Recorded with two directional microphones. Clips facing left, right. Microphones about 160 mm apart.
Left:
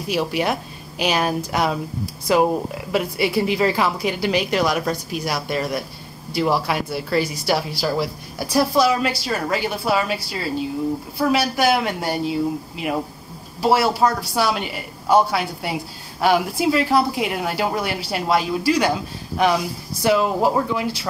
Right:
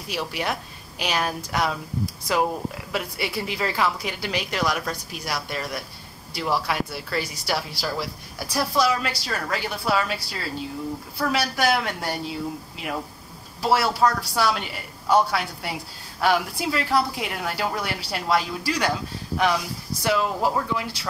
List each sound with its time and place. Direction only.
0.1 s a woman's voice: 15° left (ahead or behind)
13.6 s a woman's voice: 20° left (ahead or behind)